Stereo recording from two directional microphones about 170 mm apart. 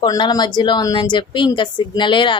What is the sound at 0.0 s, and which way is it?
A woman's voice, 25° left (ahead or behind).